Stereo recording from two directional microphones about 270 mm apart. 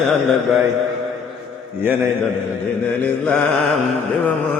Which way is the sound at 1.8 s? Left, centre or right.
Centre.